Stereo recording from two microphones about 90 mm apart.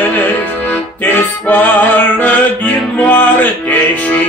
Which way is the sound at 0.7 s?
15° left (ahead or behind).